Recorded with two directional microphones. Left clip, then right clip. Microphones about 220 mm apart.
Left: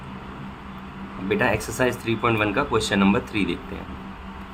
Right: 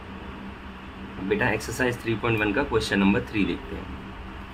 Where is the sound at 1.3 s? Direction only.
15° left (ahead or behind).